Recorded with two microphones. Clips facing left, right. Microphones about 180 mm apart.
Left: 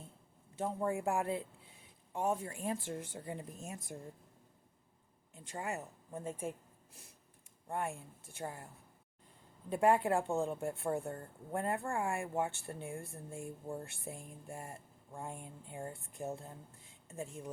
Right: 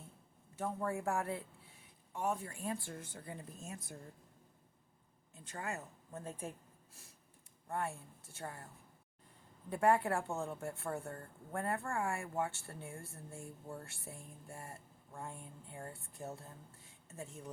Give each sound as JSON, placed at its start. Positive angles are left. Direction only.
{"t": 0.6, "sound": "speech", "side_deg": 20}
{"t": 5.3, "sound": "speech", "side_deg": 15}
{"t": 7.7, "sound": "speech", "side_deg": 15}